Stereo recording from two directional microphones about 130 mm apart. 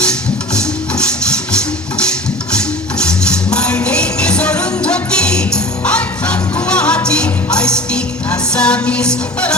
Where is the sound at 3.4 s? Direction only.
5° left (ahead or behind).